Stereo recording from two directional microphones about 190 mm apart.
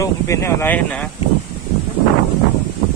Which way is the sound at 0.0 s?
15° left (ahead or behind).